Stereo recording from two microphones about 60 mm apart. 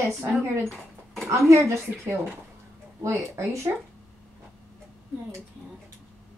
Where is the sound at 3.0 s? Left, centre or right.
Right.